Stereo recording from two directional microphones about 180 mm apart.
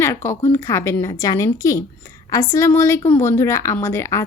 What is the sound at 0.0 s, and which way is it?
A woman's voice, 15° left (ahead or behind).